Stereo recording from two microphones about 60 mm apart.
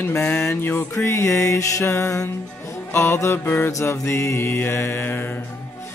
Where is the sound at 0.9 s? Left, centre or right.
Left.